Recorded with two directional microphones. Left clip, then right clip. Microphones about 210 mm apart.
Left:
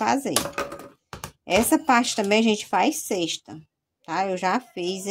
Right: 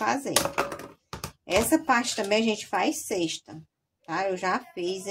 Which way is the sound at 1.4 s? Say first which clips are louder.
Left 3 dB; 45° left (ahead or behind).